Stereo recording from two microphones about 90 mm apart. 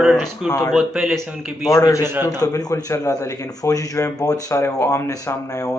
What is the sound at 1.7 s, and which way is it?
Speech, 40° left (ahead or behind).